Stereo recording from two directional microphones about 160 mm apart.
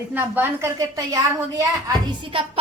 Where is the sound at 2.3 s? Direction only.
35° right (ahead or behind).